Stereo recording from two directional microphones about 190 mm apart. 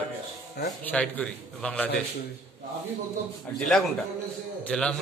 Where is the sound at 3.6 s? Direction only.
Centre (ahead or behind).